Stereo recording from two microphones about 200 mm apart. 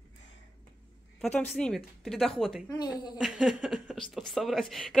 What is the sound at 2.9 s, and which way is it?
Speech, 5° right (ahead or behind).